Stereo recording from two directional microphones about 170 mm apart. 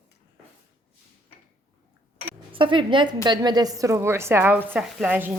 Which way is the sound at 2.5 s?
30° right (ahead or behind).